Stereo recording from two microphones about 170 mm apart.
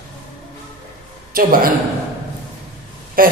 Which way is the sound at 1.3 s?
60° right (ahead or behind).